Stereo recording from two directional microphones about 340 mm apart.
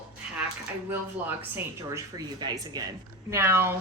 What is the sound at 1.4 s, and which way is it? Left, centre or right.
A woman's voice, centre.